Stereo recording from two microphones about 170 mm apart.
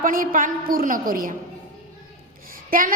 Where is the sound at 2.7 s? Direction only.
55° right (ahead or behind).